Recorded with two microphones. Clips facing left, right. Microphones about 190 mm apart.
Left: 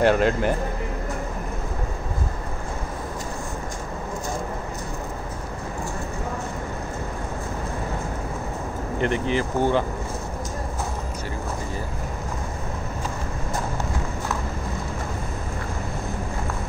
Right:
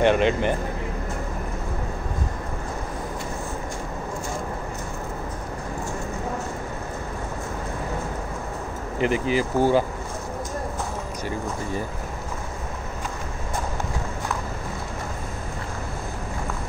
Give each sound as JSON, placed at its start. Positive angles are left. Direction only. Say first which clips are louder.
{"t": 0.0, "sound": "speech", "louder": "even", "side_deg": 0}
{"t": 9.0, "sound": "speech", "louder": "right 2 dB", "side_deg": -5}